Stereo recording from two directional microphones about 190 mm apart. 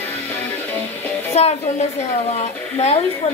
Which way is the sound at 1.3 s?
35° left (ahead or behind).